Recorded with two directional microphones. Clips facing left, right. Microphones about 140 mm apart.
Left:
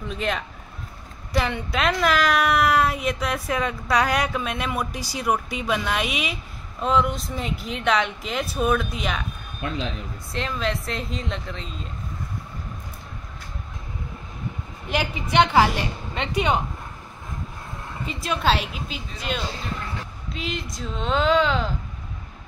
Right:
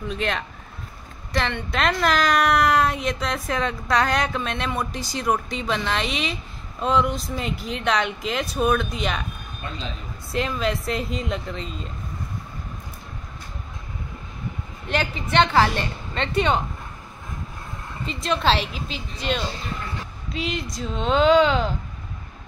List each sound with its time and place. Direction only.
0.1 s a woman's voice: centre (ahead or behind)
9.6 s a man's voice: 90° left
10.3 s speech: 5° right (ahead or behind)
14.9 s a woman's voice: 10° left (ahead or behind)
18.0 s speech: 5° left (ahead or behind)